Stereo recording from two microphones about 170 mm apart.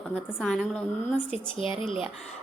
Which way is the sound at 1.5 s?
30° left (ahead or behind).